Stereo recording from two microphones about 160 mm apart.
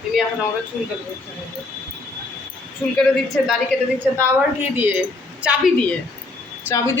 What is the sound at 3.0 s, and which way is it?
Speech, 5° left (ahead or behind).